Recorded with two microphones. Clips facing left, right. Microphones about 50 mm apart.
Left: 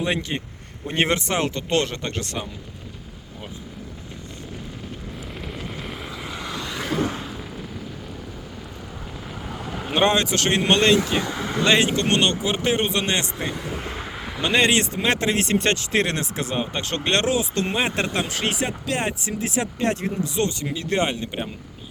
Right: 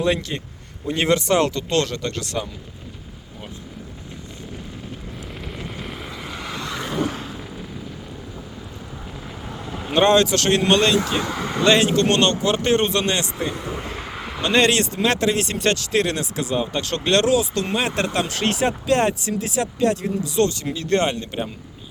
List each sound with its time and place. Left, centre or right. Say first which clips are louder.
0.0 s speech: right 3 dB; left
5.4 s vehicle: right 1 dB; centre
7.1 s a sound: even; centre
9.8 s speech: right 4 dB; centre; by 10.9 s left
11.3 s a sound: right 1 dB; centre
11.6 s speech: right 3 dB; left
14.4 s speech: right 2 dB; centre
19.2 s speech: right 2 dB; left
20.7 s speech: right 3 dB; centre